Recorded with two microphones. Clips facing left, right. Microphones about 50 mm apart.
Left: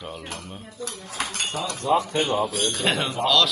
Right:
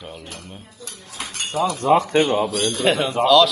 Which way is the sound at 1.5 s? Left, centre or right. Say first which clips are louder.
Right 12 dB; right.